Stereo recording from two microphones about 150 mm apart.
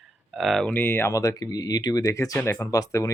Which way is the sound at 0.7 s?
15° left (ahead or behind).